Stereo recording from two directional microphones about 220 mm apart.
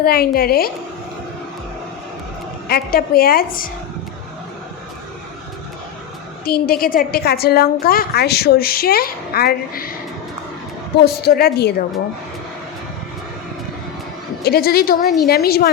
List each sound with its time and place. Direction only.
0.0 s a woman's voice: 45° left (ahead or behind)
2.6 s a woman's voice: 45° left (ahead or behind)
6.4 s a woman's voice: 45° left (ahead or behind)
11.0 s a woman's voice: 45° left (ahead or behind)
14.4 s a woman's voice: 45° left (ahead or behind)